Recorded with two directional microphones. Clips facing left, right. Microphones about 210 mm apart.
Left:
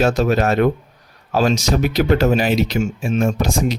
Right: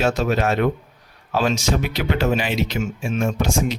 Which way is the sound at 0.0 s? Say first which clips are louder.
Left 4 dB; 40° left (ahead or behind).